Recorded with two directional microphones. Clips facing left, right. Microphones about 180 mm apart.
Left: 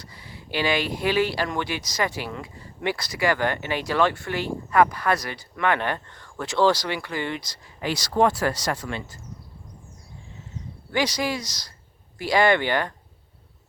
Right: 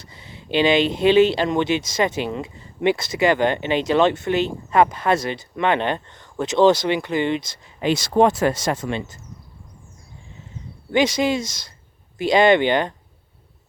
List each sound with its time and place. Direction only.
0.0 s speech: 20° right (ahead or behind)
10.9 s speech: 25° right (ahead or behind)